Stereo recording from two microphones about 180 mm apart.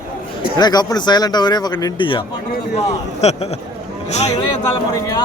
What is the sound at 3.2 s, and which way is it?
A man's voice, 40° left (ahead or behind).